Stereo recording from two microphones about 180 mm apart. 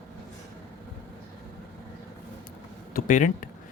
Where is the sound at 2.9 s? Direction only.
45° left (ahead or behind).